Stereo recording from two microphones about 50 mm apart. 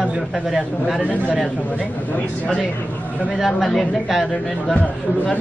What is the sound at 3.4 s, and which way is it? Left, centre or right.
Speech, centre.